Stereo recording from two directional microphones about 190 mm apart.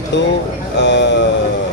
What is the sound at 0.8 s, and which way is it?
Speech, 70° left (ahead or behind).